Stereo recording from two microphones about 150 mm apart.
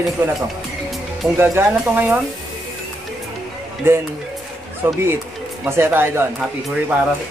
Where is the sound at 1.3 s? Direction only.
15° right (ahead or behind).